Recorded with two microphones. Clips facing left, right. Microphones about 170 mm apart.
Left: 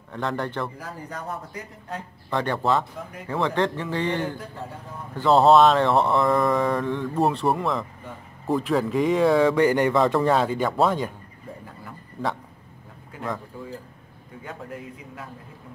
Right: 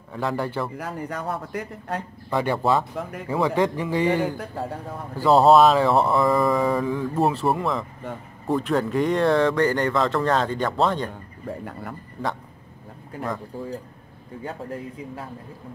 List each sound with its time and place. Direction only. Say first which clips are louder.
0.1 s mantra: right 2 dB; 5° right (ahead or behind)
0.7 s a man's voice: right 5 dB; 65° right (ahead or behind)
2.2 s a man's voice: right 2 dB; 10° right (ahead or behind)
5.1 s mantra: right 1 dB; 5° right (ahead or behind)
8.5 s speech: even; centre (ahead or behind)
13.5 s a man's voice: right 5 dB; 35° right (ahead or behind)